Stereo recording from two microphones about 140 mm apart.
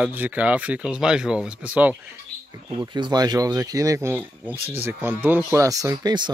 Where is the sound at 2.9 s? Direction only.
30° right (ahead or behind).